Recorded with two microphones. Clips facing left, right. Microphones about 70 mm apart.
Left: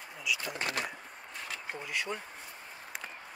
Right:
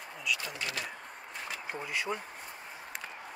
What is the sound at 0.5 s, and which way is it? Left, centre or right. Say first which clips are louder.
Speech: left 3 dB; left.